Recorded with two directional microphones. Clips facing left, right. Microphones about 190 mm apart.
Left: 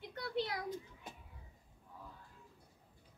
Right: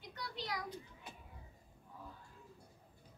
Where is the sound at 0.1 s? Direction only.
55° left (ahead or behind).